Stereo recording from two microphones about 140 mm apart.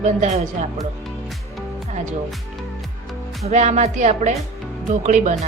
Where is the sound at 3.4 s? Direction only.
55° right (ahead or behind).